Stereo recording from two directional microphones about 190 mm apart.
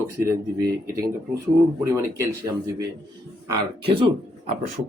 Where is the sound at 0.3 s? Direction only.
20° right (ahead or behind).